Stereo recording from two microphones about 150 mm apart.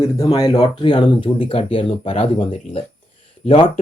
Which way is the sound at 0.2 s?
25° left (ahead or behind).